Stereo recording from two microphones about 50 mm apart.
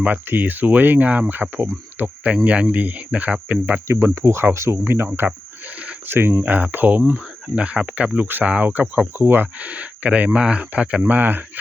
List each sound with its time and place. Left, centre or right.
0.0 s speech: right
2.3 s speech: right
3.8 s speech: right
5.0 s a sound: right
5.7 s a sound: right
6.1 s speech: right
6.4 s speech: right
7.5 s speech: right
9.6 s speech: right
11.0 s speech: right